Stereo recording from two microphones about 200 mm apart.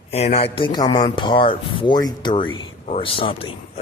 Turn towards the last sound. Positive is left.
turn(degrees=30)  # may be behind; listen again after turning